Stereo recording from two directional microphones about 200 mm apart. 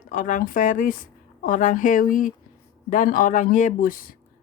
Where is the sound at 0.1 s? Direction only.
40° left (ahead or behind).